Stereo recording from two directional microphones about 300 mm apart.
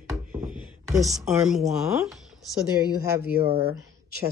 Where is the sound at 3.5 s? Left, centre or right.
Centre.